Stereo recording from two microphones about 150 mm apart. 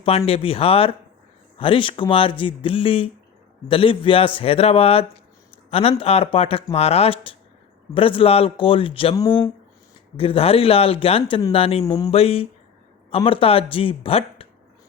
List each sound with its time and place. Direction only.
0.3 s speech: 40° left (ahead or behind)
9.1 s speech: 20° left (ahead or behind)
10.2 s speech: 40° left (ahead or behind)